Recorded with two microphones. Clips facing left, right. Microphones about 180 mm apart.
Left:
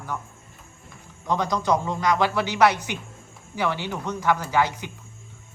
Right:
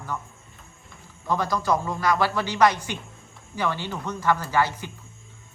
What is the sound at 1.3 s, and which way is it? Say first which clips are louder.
A woman's voice: left 1 dB; 20° left (ahead or behind).